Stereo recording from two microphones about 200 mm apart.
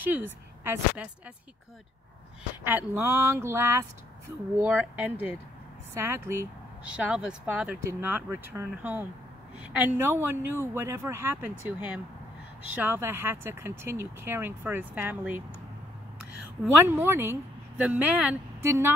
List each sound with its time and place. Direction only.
0.0 s speech: 10° right (ahead or behind)
2.6 s speech: 10° right (ahead or behind)
12.7 s speech: 10° right (ahead or behind)
16.8 s a woman's voice: 10° right (ahead or behind)